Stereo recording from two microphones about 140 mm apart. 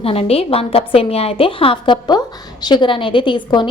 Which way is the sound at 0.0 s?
45° left (ahead or behind).